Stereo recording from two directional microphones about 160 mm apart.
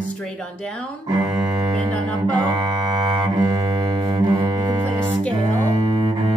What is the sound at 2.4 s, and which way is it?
Cello, 30° right (ahead or behind).